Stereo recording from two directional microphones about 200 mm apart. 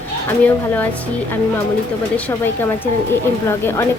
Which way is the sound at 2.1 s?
10° left (ahead or behind).